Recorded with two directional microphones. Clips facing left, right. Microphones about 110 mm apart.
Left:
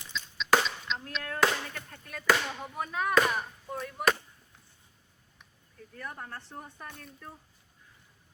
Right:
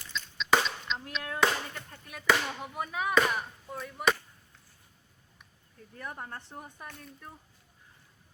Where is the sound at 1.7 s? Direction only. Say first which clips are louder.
Left 2 dB; 15° right (ahead or behind).